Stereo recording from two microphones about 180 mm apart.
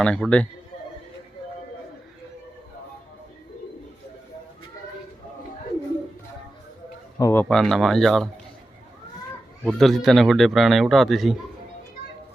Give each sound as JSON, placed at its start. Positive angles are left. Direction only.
{"t": 0.0, "sound": "a man's voice", "side_deg": 5}
{"t": 7.2, "sound": "speech", "side_deg": 15}
{"t": 7.4, "sound": "a man's voice", "side_deg": 0}
{"t": 9.6, "sound": "a man's voice", "side_deg": 0}